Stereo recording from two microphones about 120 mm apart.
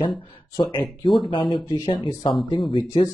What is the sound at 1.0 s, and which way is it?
Speech, centre (ahead or behind).